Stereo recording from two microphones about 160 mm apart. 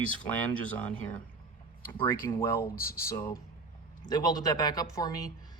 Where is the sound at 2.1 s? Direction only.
20° left (ahead or behind).